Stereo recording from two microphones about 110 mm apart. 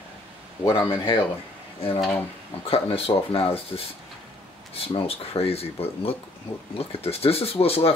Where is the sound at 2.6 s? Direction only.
60° left (ahead or behind).